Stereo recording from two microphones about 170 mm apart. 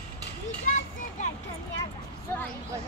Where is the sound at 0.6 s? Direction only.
45° left (ahead or behind).